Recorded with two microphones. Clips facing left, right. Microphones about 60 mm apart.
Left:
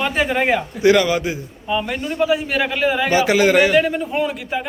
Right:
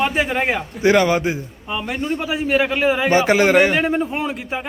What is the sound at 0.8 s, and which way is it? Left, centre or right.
A man's voice, right.